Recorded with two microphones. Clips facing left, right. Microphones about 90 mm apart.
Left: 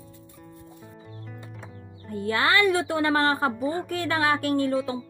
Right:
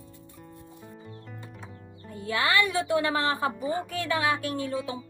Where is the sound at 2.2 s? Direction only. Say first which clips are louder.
Left 3 dB; 45° left (ahead or behind).